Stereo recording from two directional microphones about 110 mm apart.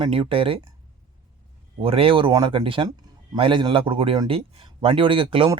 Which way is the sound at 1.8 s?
55° right (ahead or behind).